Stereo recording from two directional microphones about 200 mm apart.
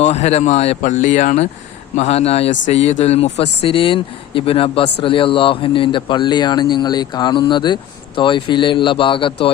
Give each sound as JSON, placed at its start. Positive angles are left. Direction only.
{"t": 0.0, "sound": "speech", "side_deg": 35}